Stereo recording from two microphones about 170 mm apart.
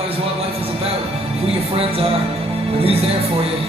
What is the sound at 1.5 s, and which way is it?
Music, 35° right (ahead or behind).